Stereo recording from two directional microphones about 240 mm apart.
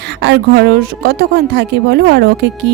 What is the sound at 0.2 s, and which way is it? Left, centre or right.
Speech, right.